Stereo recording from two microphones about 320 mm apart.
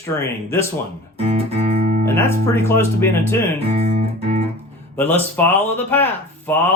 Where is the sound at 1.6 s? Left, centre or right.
Right.